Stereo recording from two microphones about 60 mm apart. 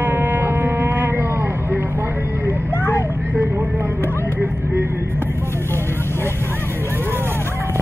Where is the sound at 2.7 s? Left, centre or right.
Left.